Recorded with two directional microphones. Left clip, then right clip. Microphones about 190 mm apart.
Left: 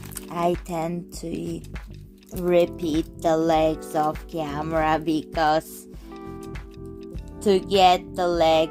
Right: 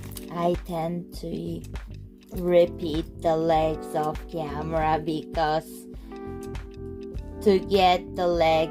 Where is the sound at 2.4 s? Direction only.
35° left (ahead or behind).